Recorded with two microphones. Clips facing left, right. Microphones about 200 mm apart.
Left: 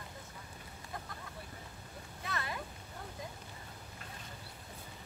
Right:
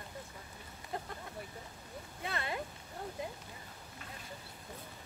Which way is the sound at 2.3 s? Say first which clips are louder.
Right 2 dB; 25° right (ahead or behind).